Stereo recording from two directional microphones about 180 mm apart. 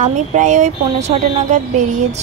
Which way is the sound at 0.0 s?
40° right (ahead or behind).